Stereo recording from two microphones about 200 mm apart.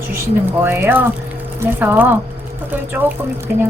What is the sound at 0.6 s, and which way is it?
A woman's voice, 10° right (ahead or behind).